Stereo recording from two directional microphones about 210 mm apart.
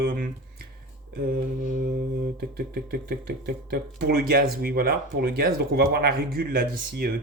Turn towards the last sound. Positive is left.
turn(degrees=-45)  # may be behind; listen again after turning